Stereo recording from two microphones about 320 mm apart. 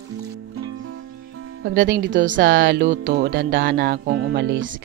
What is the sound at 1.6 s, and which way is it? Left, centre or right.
Speech, right.